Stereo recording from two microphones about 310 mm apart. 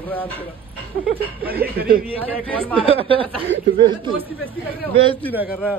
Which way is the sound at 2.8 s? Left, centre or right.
Centre.